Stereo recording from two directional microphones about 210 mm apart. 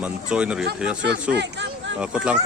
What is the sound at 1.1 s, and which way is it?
Speech, 55° right (ahead or behind).